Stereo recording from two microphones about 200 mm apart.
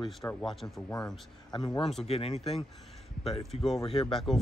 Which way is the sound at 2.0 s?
30° left (ahead or behind).